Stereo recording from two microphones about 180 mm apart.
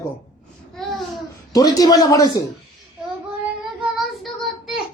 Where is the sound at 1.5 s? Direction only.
20° left (ahead or behind).